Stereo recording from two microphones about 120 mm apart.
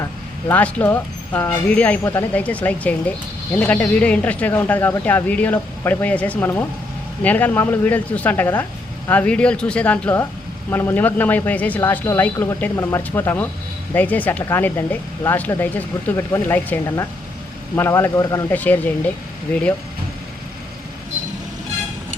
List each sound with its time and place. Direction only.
0.4 s a man's voice: 15° left (ahead or behind)
18.5 s speech: 15° left (ahead or behind)